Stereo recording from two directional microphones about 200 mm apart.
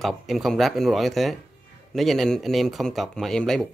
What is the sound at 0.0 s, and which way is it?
Speech, centre (ahead or behind).